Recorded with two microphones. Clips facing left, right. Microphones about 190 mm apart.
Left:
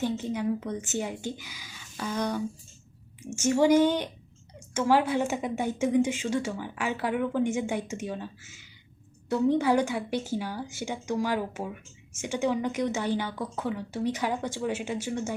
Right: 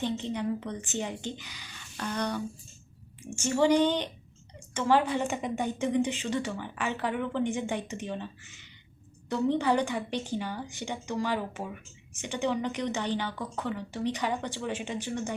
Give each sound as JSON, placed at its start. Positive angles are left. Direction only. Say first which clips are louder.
{"t": 0.0, "sound": "a woman's voice", "louder": "left 2 dB", "side_deg": 5}
{"t": 3.4, "sound": "a woman's voice", "louder": "left 3 dB", "side_deg": 10}